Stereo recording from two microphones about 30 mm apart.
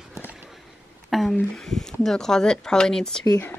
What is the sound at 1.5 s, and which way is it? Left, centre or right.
Speech, centre.